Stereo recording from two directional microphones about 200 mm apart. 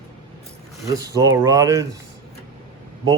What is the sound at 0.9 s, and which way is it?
Speech, 15° right (ahead or behind).